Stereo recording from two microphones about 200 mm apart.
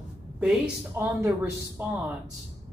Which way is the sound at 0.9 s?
15° right (ahead or behind).